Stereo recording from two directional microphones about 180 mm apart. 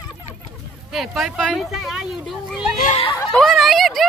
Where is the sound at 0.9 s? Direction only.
Centre (ahead or behind).